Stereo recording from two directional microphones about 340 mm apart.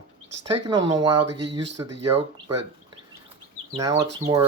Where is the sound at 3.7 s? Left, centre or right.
Centre.